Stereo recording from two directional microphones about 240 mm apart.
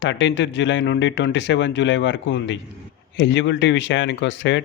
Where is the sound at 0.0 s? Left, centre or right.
Left.